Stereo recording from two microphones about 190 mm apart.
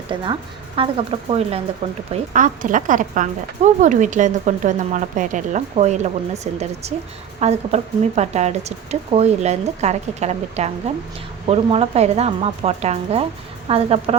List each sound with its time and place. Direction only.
0.1 s speech: 25° right (ahead or behind)
2.3 s speech: 45° right (ahead or behind)